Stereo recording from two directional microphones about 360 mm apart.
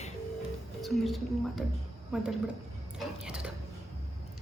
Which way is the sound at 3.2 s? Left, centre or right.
Centre.